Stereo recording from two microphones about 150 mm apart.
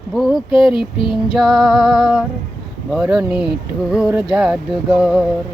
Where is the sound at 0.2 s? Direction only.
Centre (ahead or behind).